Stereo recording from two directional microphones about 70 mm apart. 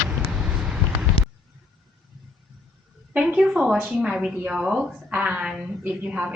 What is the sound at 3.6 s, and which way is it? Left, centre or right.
A woman's voice, centre.